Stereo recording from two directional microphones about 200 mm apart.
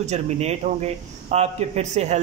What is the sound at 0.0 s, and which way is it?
A man's voice, 35° right (ahead or behind).